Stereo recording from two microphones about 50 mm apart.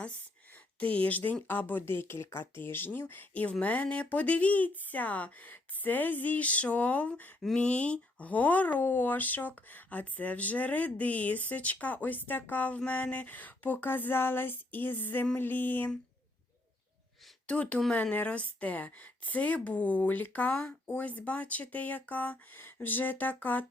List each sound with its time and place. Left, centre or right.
0.8 s speech: left
3.1 s speech: left
17.4 s speech: left